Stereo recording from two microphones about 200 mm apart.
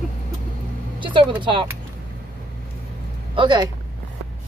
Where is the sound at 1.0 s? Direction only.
25° right (ahead or behind).